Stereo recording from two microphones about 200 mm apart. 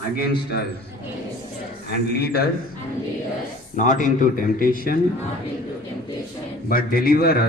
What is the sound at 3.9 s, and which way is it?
A man's voice, 40° left (ahead or behind).